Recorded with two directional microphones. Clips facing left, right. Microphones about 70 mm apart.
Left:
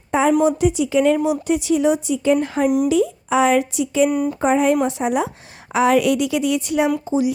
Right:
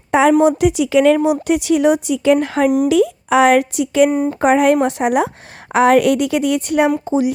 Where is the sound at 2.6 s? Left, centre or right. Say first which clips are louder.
Right 3 dB; right.